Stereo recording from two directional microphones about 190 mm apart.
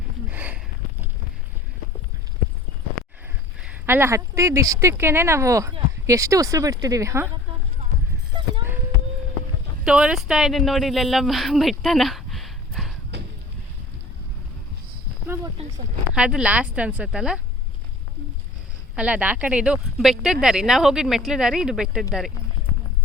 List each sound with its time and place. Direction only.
0.3 s a sound: 10° right (ahead or behind)
3.6 s speech: 10° right (ahead or behind)
8.3 s clip-clop: 25° right (ahead or behind)
9.8 s speech: 5° right (ahead or behind)
13.1 s vehicle: 65° right (ahead or behind)
15.6 s speech: 35° right (ahead or behind)
16.1 s speech: 5° right (ahead or behind)
18.9 s speech: 5° right (ahead or behind)